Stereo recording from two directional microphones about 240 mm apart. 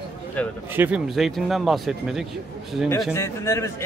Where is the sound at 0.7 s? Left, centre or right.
Centre.